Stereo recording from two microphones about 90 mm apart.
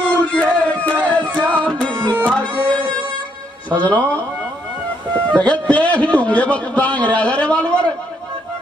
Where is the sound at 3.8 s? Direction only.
15° left (ahead or behind).